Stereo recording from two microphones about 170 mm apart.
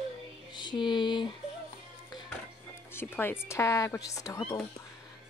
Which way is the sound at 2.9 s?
15° left (ahead or behind).